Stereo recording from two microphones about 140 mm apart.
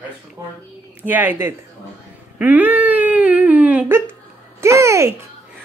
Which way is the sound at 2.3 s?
10° right (ahead or behind).